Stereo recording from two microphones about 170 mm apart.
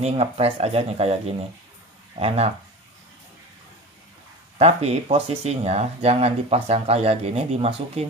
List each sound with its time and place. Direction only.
0.0 s speech: 40° right (ahead or behind)
4.6 s speech: 35° right (ahead or behind)